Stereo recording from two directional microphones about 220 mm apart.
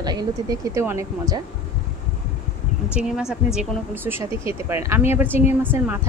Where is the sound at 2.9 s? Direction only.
5° right (ahead or behind).